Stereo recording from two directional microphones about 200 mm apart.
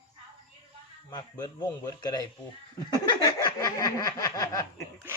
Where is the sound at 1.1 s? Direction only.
20° left (ahead or behind).